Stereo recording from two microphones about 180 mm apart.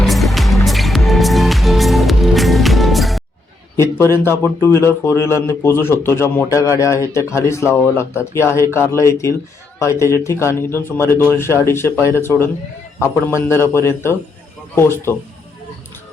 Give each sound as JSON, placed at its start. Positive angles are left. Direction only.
{"t": 0.0, "sound": "music", "side_deg": 0}
{"t": 3.8, "sound": "speech", "side_deg": 15}